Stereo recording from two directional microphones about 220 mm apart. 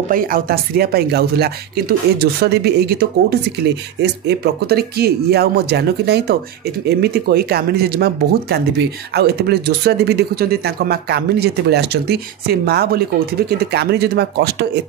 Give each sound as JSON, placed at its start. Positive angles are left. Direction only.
{"t": 0.1, "sound": "speech", "side_deg": -40}